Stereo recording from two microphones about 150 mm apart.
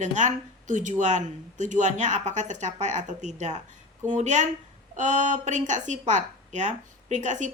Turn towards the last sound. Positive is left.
turn(degrees=-55)  # may be behind; listen again after turning